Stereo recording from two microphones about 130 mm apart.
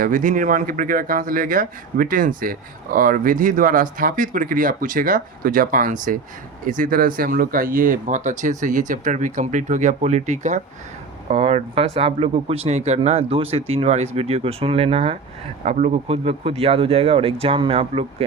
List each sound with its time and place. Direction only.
0.0 s speech: 90° right; by 10.6 s 65° right (ahead or behind)
11.3 s speech: 50° right (ahead or behind)